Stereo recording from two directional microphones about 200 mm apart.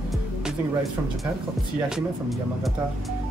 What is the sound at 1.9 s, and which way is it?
Music, centre (ahead or behind).